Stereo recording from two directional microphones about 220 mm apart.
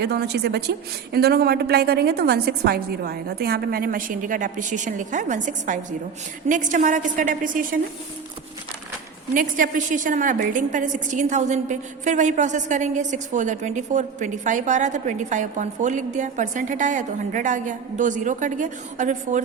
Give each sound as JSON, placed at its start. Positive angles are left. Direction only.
{"t": 0.0, "sound": "a woman's voice", "side_deg": -50}
{"t": 9.3, "sound": "a woman's voice", "side_deg": -40}